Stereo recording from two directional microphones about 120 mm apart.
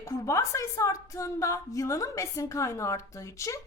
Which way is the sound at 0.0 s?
25° left (ahead or behind).